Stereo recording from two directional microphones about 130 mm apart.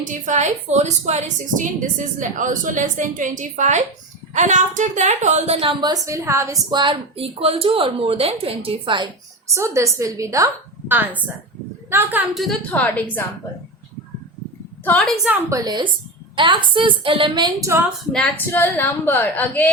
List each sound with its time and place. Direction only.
0.0 s a woman's voice: 75° right (ahead or behind); by 5.7 s 50° right (ahead or behind)
5.8 s a woman's voice: 25° right (ahead or behind)
6.7 s a woman's voice: 35° right (ahead or behind)
9.6 s a woman's voice: 25° right (ahead or behind)
12.3 s a woman's voice: centre (ahead or behind)
12.7 s speech: 10° left (ahead or behind)
15.0 s a woman's voice: centre (ahead or behind)
15.3 s a woman's voice: 25° right (ahead or behind)
18.3 s speech: 15° left (ahead or behind)